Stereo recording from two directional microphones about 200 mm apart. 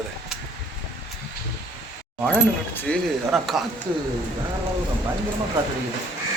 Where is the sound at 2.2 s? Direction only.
5° left (ahead or behind).